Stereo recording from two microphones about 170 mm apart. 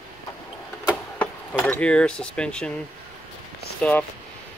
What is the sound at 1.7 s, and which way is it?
Cutlery, 5° left (ahead or behind).